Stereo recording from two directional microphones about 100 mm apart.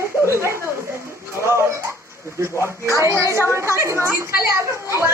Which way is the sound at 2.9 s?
30° right (ahead or behind).